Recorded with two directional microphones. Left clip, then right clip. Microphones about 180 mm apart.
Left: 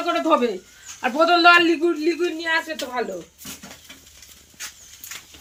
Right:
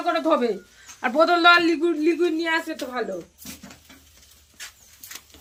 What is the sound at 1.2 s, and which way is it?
A man's voice, 30° right (ahead or behind).